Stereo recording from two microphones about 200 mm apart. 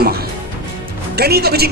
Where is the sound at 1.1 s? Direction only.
50° right (ahead or behind).